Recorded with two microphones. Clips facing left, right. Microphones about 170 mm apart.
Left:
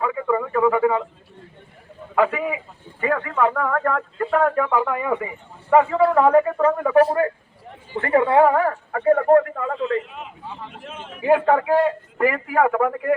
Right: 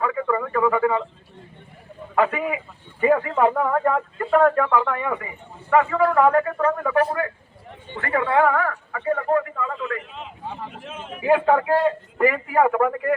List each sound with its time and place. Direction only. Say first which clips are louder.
0.0 s radio: left 1 dB; 5° left (ahead or behind)
2.1 s a man's voice: left 1 dB; centre (ahead or behind)
3.2 s speech: right 1 dB; 25° right (ahead or behind)
4.2 s speech: right 2 dB; centre (ahead or behind)
5.7 s a man's voice: left 2 dB; 25° left (ahead or behind)
6.2 s speech: left 3 dB; 15° left (ahead or behind)
7.0 s a man's voice: left 5 dB; 35° left (ahead or behind); by 9.7 s 50° left (ahead or behind)
9.7 s a man's voice: left 10 dB; 30° left (ahead or behind)
10.7 s a man's voice: right 1 dB; 5° right (ahead or behind)